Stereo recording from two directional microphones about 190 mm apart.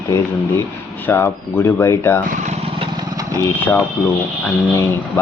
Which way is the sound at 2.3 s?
40° right (ahead or behind).